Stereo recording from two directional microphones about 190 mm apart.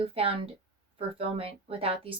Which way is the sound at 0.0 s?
30° right (ahead or behind).